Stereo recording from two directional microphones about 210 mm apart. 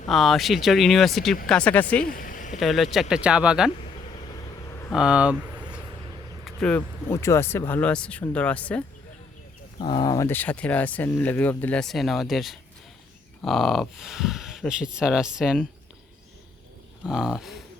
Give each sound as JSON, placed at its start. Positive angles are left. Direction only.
{"t": 0.1, "sound": "speech", "side_deg": 0}
{"t": 2.0, "sound": "vehicle", "side_deg": 40}
{"t": 2.6, "sound": "speech", "side_deg": 0}
{"t": 4.3, "sound": "vehicle", "side_deg": 15}
{"t": 4.9, "sound": "speech", "side_deg": -5}
{"t": 6.4, "sound": "speech", "side_deg": 5}
{"t": 9.7, "sound": "speech", "side_deg": 20}
{"t": 17.0, "sound": "speech", "side_deg": 0}